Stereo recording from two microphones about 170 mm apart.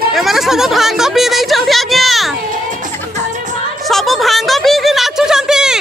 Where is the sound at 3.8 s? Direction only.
Centre (ahead or behind).